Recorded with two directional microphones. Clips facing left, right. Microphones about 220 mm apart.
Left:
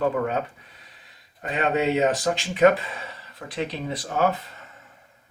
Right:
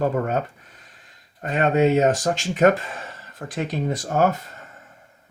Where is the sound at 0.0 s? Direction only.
45° right (ahead or behind).